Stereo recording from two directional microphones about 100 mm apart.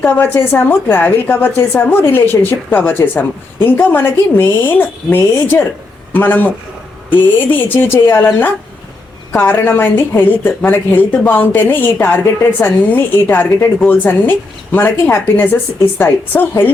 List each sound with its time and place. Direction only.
0.0 s a woman's voice: 20° left (ahead or behind)
9.3 s a woman's voice: 25° left (ahead or behind)